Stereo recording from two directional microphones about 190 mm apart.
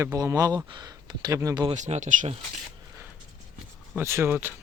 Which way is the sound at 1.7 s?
40° right (ahead or behind).